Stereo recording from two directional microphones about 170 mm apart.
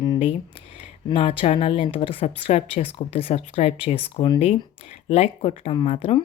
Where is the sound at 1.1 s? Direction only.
35° left (ahead or behind).